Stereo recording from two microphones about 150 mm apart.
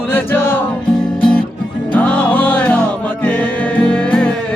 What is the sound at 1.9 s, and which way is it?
Music, 10° left (ahead or behind).